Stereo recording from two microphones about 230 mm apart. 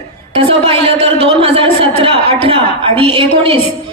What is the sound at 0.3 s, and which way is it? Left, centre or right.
A woman's voice, right.